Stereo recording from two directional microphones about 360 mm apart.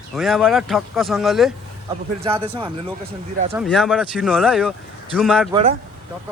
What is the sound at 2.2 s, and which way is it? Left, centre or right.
Speech, centre.